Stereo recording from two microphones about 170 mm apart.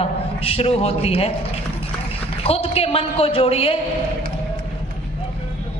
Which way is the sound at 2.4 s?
35° left (ahead or behind).